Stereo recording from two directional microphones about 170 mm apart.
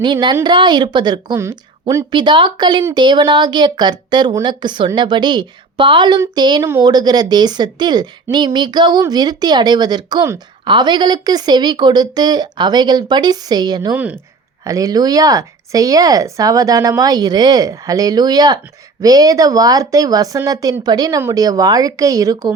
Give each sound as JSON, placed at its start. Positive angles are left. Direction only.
{"t": 0.0, "sound": "a woman's voice", "side_deg": -25}
{"t": 13.9, "sound": "speech", "side_deg": -10}
{"t": 14.6, "sound": "a woman's voice", "side_deg": -20}